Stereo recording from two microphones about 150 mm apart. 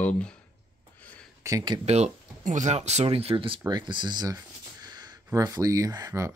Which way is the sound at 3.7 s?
30° right (ahead or behind).